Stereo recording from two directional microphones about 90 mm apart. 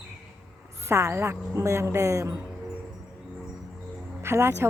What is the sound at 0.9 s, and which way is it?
Speech, 30° right (ahead or behind).